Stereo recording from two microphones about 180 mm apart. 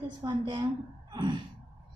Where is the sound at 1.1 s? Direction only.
25° right (ahead or behind).